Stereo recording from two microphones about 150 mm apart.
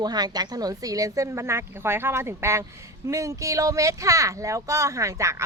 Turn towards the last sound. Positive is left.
turn(degrees=-20)  # may be behind; listen again after turning